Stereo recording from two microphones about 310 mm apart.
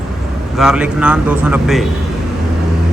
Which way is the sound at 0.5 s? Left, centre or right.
Centre.